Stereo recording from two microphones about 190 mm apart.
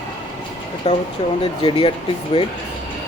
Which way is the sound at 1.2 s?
25° left (ahead or behind).